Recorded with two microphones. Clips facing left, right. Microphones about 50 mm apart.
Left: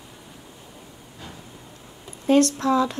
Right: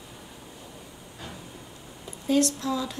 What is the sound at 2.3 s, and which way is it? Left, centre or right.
Speech, left.